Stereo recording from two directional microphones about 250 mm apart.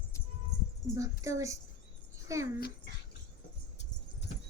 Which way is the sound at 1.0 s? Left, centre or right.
Centre.